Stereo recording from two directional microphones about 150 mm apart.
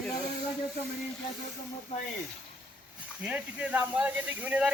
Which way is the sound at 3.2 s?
10° right (ahead or behind).